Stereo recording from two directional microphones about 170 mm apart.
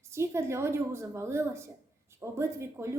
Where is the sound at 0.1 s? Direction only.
15° right (ahead or behind).